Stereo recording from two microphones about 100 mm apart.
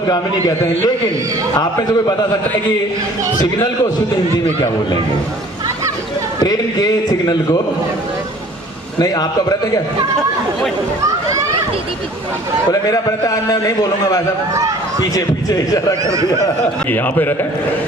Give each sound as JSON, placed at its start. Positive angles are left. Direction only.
{"t": 1.5, "sound": "a man's voice", "side_deg": 40}
{"t": 6.4, "sound": "a man's voice", "side_deg": 40}
{"t": 9.0, "sound": "a man's voice", "side_deg": 40}
{"t": 12.7, "sound": "a man's voice", "side_deg": 35}
{"t": 16.9, "sound": "a man's voice", "side_deg": 20}